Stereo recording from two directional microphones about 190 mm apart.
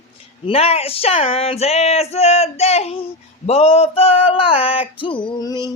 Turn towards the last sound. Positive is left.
turn(degrees=20)  # may be behind; listen again after turning